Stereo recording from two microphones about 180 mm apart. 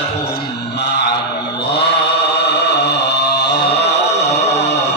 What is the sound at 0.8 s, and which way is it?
Chant, 75° left (ahead or behind).